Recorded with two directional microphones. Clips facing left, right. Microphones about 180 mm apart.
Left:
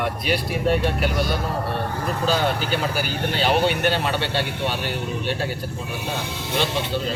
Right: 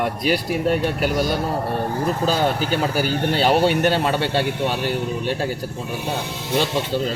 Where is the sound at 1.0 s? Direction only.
40° right (ahead or behind).